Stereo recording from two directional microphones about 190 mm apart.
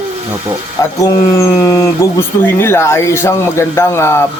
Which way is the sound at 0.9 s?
15° left (ahead or behind).